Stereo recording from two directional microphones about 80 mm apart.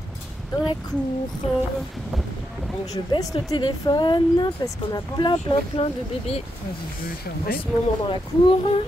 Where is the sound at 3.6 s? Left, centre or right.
Left.